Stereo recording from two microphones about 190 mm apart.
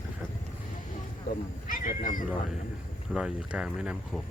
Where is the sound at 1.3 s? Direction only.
45° left (ahead or behind).